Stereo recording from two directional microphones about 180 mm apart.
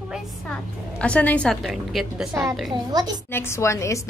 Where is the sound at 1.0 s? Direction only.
5° left (ahead or behind).